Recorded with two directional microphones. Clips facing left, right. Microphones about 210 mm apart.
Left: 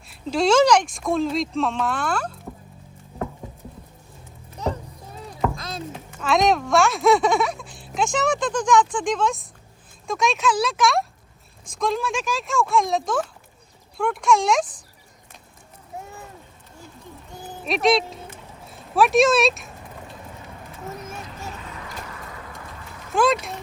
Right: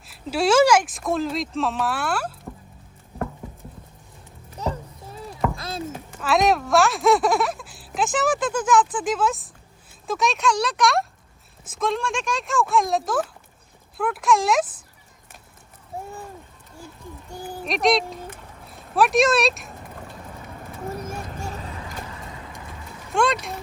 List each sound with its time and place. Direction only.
0.1 s speech: 5° right (ahead or behind)
5.6 s speech: 5° right (ahead or behind)
17.7 s speech: centre (ahead or behind)
21.4 s vehicle: 35° right (ahead or behind)
23.1 s speech: centre (ahead or behind)